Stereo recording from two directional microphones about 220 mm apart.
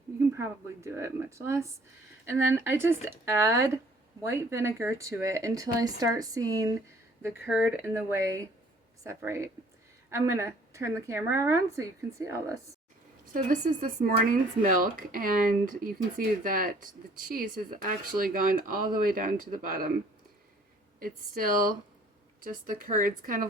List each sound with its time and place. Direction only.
0.3 s speech: 15° right (ahead or behind)
13.3 s speech: 40° right (ahead or behind)
21.0 s speech: 40° right (ahead or behind)